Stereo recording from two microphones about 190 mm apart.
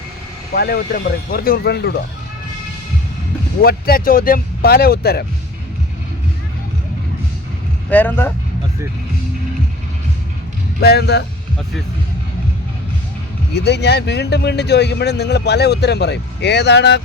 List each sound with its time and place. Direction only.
0.5 s a man's voice: 55° left (ahead or behind)
3.6 s speech: 55° left (ahead or behind)
7.9 s speech: 10° left (ahead or behind)
10.8 s a man's voice: 60° left (ahead or behind)
13.5 s a man's voice: 60° left (ahead or behind)